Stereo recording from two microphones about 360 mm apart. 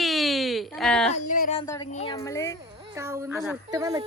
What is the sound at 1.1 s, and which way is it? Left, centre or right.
Music, left.